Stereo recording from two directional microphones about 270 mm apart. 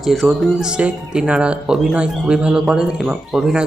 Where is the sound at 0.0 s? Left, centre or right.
Centre.